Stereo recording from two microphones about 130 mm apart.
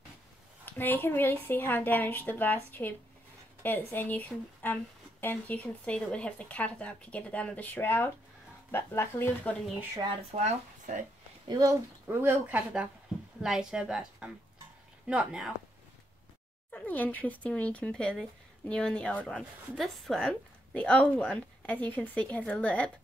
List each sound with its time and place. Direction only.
0.7 s speech: 15° left (ahead or behind)
10.3 s speech: 60° right (ahead or behind)
11.4 s speech: 30° right (ahead or behind); by 15.5 s 5° right (ahead or behind)
16.7 s speech: 15° left (ahead or behind)